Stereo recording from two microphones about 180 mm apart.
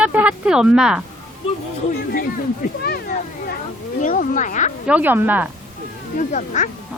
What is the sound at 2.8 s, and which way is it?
Children playing, 60° left (ahead or behind).